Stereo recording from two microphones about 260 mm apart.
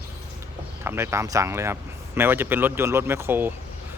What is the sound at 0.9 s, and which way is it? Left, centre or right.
Speech, centre.